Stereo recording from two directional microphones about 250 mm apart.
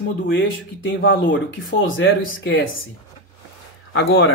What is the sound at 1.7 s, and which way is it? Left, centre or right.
Speech, left.